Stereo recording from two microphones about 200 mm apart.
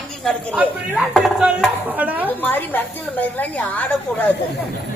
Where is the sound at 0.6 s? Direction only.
10° right (ahead or behind).